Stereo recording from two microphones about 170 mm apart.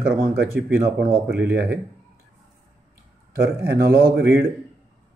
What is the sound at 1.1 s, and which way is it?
Speech, 65° right (ahead or behind).